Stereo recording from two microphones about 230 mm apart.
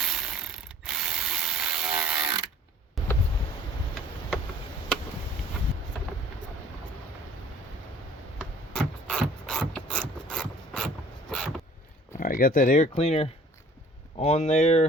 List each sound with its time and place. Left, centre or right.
0.0 s ratchet: centre
2.0 s ratchet: centre
8.7 s mechanisms: centre
12.2 s speech: left